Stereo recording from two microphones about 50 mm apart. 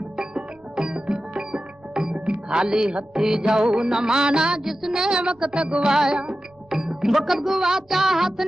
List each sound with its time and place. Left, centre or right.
0.2 s music: centre